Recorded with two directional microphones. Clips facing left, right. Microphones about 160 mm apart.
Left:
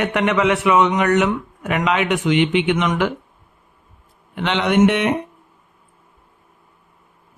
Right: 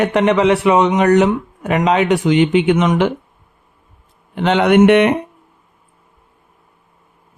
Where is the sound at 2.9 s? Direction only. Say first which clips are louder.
Right 5 dB; 20° right (ahead or behind).